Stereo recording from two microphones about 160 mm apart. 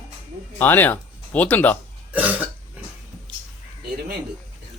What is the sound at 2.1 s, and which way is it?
Cough, 10° right (ahead or behind).